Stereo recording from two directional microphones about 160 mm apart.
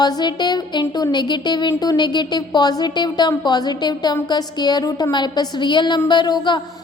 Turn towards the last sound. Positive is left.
turn(degrees=30)  # may be behind; listen again after turning